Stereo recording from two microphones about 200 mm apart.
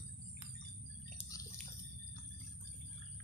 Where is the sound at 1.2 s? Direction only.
30° left (ahead or behind).